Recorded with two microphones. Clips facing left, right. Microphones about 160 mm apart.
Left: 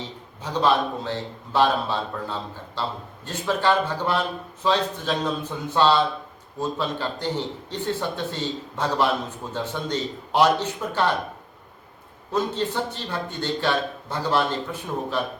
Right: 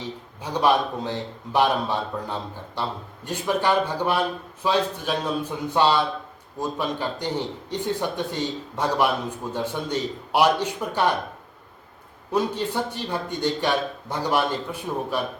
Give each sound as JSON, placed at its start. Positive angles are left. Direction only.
{"t": 0.4, "sound": "a man's voice", "side_deg": -10}
{"t": 12.3, "sound": "a man's voice", "side_deg": -10}